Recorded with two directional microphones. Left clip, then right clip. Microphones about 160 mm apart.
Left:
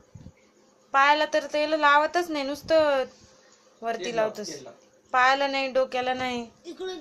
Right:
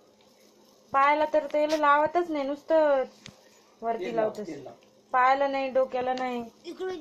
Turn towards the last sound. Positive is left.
turn(degrees=20)  # may be behind; listen again after turning